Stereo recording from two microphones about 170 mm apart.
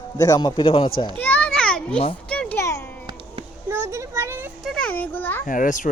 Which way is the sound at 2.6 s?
15° left (ahead or behind).